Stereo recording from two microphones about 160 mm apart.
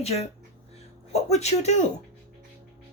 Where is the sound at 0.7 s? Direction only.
40° left (ahead or behind).